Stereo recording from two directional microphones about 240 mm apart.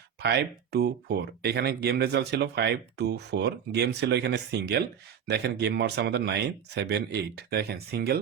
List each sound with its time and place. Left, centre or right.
0.2 s speech: right